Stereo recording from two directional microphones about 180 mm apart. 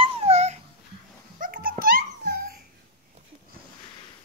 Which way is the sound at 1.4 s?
50° right (ahead or behind).